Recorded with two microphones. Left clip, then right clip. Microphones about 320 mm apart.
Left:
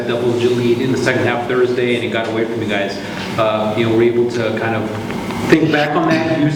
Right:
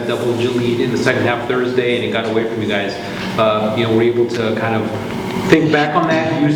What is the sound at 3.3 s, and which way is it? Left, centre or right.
Speech, centre.